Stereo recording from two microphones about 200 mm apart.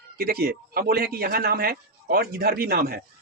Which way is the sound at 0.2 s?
50° right (ahead or behind).